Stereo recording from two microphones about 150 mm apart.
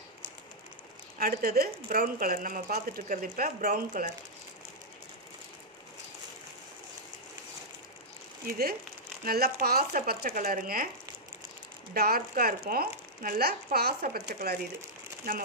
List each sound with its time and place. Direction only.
1.1 s speech: 80° right
8.5 s speech: 90° right; by 10.9 s 70° right (ahead or behind)
11.9 s speech: 90° right